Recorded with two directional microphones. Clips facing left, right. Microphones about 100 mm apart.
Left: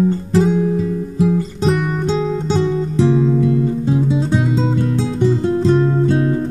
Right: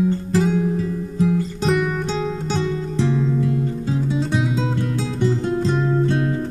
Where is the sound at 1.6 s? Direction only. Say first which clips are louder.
Left 2 dB; centre (ahead or behind).